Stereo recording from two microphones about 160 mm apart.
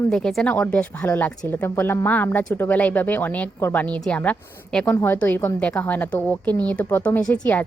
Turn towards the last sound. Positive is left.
turn(degrees=10)  # may be behind; listen again after turning